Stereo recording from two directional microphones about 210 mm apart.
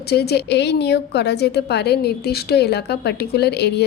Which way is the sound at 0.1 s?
50° left (ahead or behind).